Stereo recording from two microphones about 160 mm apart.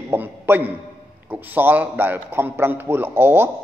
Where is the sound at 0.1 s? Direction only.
10° right (ahead or behind).